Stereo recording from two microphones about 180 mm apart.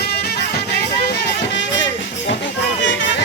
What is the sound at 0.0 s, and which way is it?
Music, 65° left (ahead or behind).